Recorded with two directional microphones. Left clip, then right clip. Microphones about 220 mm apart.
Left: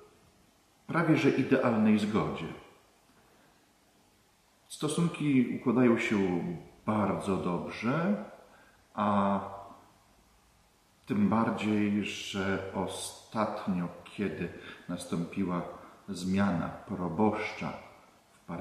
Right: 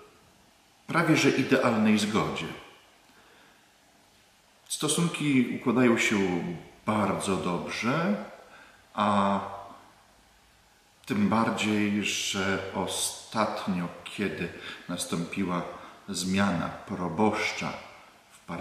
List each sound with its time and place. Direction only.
0.8 s speech: 5° left (ahead or behind)
4.6 s speech: 5° left (ahead or behind)
8.9 s a sound: 5° left (ahead or behind)
11.1 s speech: 5° left (ahead or behind)
16.1 s speech: 5° left (ahead or behind)